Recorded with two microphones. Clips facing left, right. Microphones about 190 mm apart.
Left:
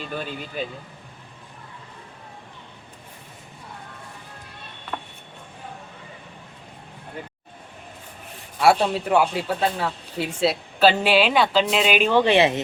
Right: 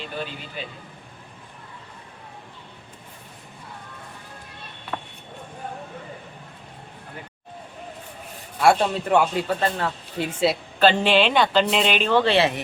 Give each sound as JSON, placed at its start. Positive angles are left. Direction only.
{"t": 0.6, "sound": "speech", "side_deg": 45}
{"t": 8.6, "sound": "a woman's voice", "side_deg": 0}